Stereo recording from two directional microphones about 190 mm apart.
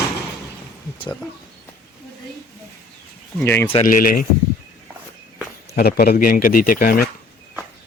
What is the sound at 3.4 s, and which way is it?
Speech, 10° left (ahead or behind).